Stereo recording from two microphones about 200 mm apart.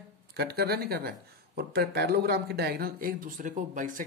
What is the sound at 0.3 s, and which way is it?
Speech, 55° right (ahead or behind).